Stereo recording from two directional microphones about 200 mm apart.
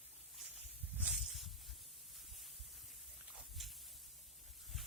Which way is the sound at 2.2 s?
Centre (ahead or behind).